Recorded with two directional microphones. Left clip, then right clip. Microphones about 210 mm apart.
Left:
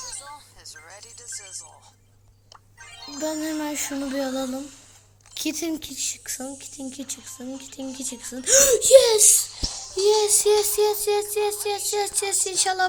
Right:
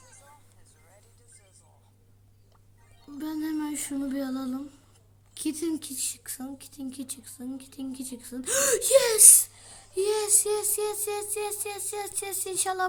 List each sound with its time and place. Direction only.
0.8 s music: 45° left (ahead or behind)
3.2 s speech: centre (ahead or behind)
9.7 s child singing: 40° left (ahead or behind)
10.1 s speech: centre (ahead or behind)